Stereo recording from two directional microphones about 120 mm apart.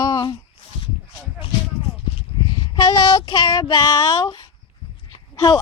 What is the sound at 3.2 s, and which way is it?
Child singing, 50° left (ahead or behind).